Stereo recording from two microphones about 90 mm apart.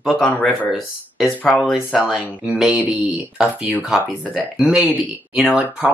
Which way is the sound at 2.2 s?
15° right (ahead or behind).